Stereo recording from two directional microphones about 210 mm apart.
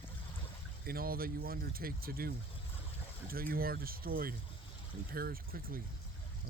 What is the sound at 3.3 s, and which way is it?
Speech, 45° right (ahead or behind).